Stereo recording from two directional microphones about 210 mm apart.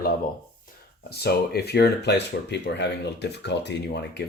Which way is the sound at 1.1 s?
50° left (ahead or behind).